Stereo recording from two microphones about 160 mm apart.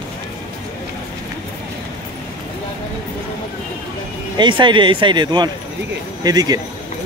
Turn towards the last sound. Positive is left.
turn(degrees=-25)  # may be behind; listen again after turning